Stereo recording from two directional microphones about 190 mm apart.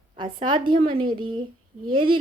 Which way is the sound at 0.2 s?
25° right (ahead or behind).